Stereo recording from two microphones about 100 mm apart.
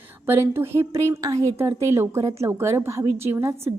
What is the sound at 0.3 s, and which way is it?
A woman's voice, 25° right (ahead or behind).